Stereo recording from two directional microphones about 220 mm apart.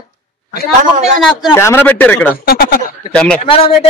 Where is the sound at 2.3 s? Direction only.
40° left (ahead or behind).